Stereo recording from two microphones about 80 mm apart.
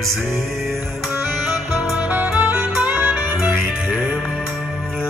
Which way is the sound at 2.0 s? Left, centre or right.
Right.